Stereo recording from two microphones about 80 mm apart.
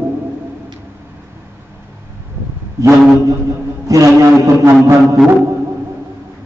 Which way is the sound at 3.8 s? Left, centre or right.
Right.